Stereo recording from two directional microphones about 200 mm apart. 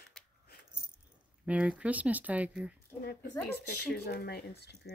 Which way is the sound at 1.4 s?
5° right (ahead or behind).